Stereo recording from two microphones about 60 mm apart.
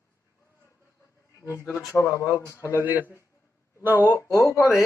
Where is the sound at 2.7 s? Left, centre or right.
Right.